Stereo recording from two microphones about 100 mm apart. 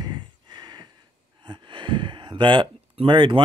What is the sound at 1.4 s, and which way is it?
Speech, 55° right (ahead or behind).